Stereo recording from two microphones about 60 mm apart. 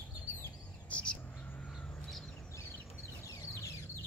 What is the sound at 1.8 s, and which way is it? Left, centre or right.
Crow, centre.